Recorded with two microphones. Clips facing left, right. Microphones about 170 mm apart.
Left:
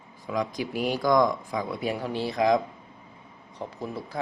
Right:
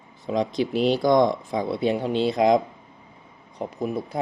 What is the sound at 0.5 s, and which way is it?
Speech, 25° right (ahead or behind).